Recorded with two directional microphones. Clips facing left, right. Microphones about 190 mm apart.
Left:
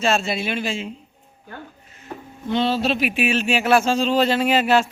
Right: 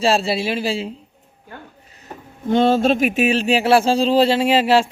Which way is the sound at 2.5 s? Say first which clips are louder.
Right 5 dB; 50° right (ahead or behind).